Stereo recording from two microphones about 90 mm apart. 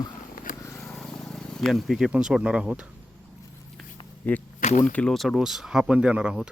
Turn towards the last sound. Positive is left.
turn(degrees=-10)  # may be behind; listen again after turning